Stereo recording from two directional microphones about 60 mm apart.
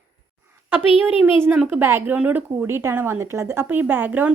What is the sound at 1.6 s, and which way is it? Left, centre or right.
A woman's voice, right.